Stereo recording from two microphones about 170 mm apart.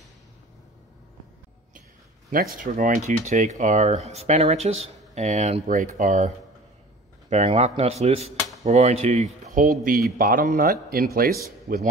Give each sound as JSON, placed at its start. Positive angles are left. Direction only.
{"t": 2.3, "sound": "speech", "side_deg": -55}